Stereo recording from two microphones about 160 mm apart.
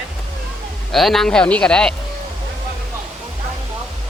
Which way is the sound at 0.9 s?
Centre (ahead or behind).